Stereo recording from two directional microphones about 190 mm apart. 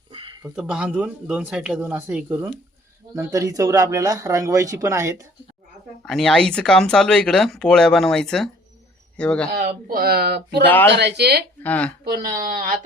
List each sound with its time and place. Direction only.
0.1 s a sound: 25° right (ahead or behind)
0.4 s speech: 5° right (ahead or behind)
6.1 s speech: centre (ahead or behind)
9.5 s speech: 50° right (ahead or behind)
11.6 s speech: 10° left (ahead or behind)
12.0 s speech: 45° right (ahead or behind)